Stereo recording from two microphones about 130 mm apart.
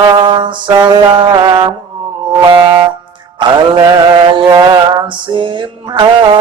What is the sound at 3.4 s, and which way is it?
Mantra, 35° right (ahead or behind).